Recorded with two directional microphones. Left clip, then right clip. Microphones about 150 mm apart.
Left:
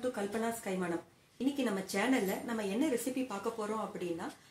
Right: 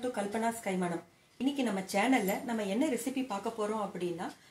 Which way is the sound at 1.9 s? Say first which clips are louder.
Right 5 dB; 45° right (ahead or behind).